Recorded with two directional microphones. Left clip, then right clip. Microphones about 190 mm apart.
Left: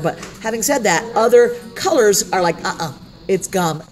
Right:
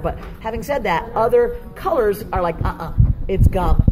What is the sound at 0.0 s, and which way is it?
A woman's voice, 45° left (ahead or behind).